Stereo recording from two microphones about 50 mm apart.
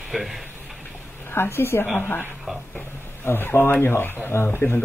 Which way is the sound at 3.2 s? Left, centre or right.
Left.